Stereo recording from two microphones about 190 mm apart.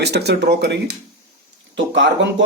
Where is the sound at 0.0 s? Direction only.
60° right (ahead or behind).